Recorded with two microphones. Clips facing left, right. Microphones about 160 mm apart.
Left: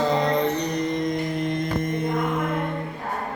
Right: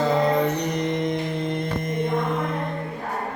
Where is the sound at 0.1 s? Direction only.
5° right (ahead or behind).